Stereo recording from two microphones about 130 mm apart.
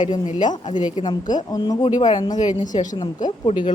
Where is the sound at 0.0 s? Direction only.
70° left (ahead or behind).